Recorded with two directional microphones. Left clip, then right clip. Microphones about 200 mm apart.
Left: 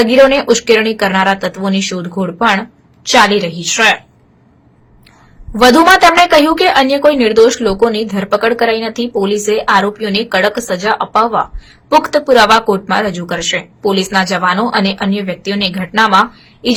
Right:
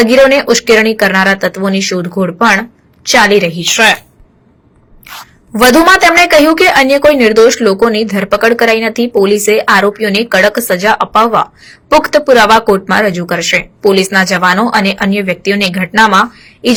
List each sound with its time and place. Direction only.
0.0 s speech: 15° right (ahead or behind)
5.5 s speech: 15° right (ahead or behind)